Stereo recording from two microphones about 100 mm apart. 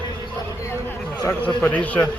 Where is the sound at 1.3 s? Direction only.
20° left (ahead or behind).